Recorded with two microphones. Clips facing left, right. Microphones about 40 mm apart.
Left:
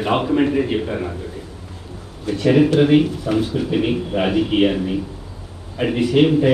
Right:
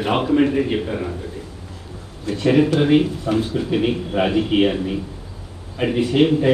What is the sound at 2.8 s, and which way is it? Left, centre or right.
A man's voice, centre.